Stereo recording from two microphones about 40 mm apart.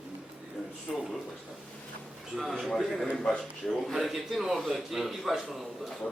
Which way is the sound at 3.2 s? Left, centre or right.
Centre.